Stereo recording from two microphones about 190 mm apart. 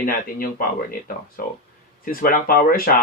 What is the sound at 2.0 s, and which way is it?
Speech, 45° left (ahead or behind).